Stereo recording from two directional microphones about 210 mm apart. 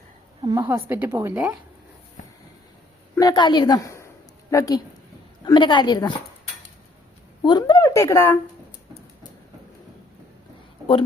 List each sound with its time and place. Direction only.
0.4 s a woman's voice: 15° right (ahead or behind)
3.2 s a woman's voice: 20° left (ahead or behind)
7.4 s speech: 20° left (ahead or behind)